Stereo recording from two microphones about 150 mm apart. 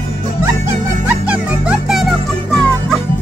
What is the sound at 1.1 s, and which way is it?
Music, 10° right (ahead or behind).